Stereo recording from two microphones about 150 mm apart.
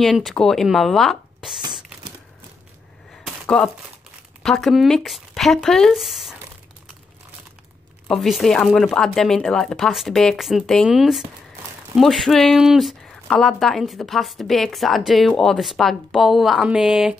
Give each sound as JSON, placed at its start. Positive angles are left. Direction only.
{"t": 0.0, "sound": "speech", "side_deg": 0}
{"t": 3.4, "sound": "speech", "side_deg": 5}
{"t": 8.1, "sound": "speech", "side_deg": 0}